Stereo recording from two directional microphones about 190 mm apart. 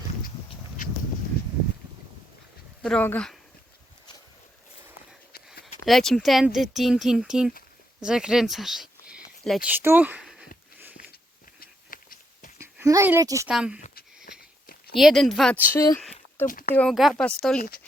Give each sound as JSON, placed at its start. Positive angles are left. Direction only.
{"t": 2.8, "sound": "speech", "side_deg": 5}
{"t": 5.8, "sound": "speech", "side_deg": 0}
{"t": 11.6, "sound": "a sound", "side_deg": 50}
{"t": 12.5, "sound": "speech", "side_deg": -15}
{"t": 13.5, "sound": "speech", "side_deg": -5}
{"t": 14.9, "sound": "speech", "side_deg": 0}
{"t": 15.7, "sound": "speech", "side_deg": 20}
{"t": 16.0, "sound": "a sound", "side_deg": 5}
{"t": 16.5, "sound": "speech", "side_deg": 45}
{"t": 16.7, "sound": "speech", "side_deg": 0}